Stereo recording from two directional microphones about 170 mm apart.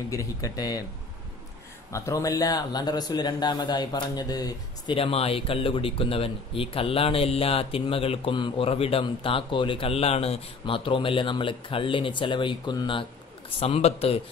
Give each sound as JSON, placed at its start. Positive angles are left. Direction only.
{"t": 0.1, "sound": "speech", "side_deg": 20}
{"t": 1.9, "sound": "a man's voice", "side_deg": 20}